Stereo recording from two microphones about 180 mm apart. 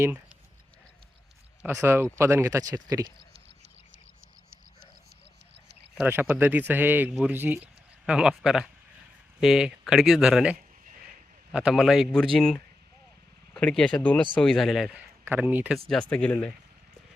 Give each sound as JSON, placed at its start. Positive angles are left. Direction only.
{"t": 1.6, "sound": "speech", "side_deg": -15}
{"t": 5.9, "sound": "speech", "side_deg": -10}
{"t": 15.9, "sound": "speech", "side_deg": 5}